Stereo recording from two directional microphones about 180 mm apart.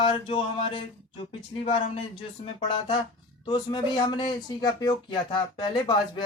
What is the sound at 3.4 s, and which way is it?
Speech, 25° left (ahead or behind).